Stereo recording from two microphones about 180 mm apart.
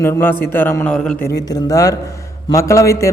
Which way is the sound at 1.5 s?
20° left (ahead or behind).